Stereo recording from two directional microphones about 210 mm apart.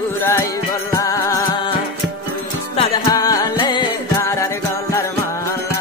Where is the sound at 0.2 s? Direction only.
10° left (ahead or behind).